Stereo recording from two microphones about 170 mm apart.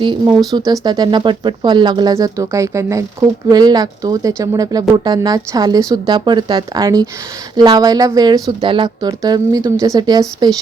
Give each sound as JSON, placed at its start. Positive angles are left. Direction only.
{"t": 0.0, "sound": "speech", "side_deg": -25}